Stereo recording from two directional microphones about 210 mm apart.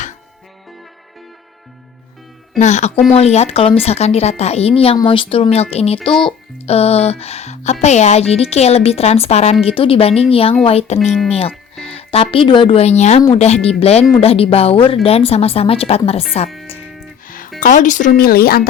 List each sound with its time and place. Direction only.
2.6 s speech: 35° left (ahead or behind)
11.0 s speech: centre (ahead or behind)
11.3 s speech: 30° left (ahead or behind)
17.2 s music: 40° left (ahead or behind)
17.6 s speech: 35° left (ahead or behind)